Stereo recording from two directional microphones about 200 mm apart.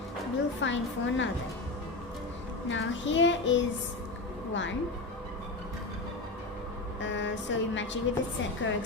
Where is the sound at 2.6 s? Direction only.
70° left (ahead or behind).